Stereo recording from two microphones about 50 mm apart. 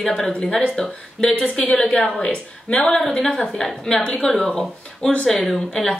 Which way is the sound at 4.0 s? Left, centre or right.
Left.